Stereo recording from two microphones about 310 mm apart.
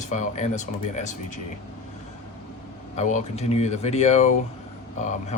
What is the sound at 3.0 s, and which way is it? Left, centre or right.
Speech, left.